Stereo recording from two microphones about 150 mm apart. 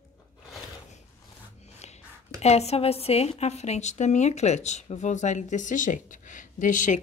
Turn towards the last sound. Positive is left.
turn(degrees=60)  # may be behind; listen again after turning